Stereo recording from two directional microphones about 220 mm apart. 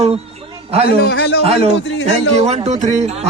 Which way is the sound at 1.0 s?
55° left (ahead or behind).